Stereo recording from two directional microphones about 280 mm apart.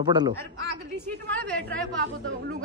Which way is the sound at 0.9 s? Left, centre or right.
Centre.